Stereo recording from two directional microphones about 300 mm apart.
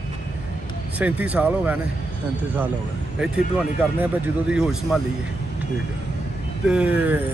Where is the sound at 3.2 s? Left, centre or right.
Centre.